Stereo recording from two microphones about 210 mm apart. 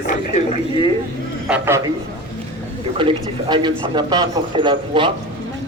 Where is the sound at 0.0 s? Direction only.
40° left (ahead or behind).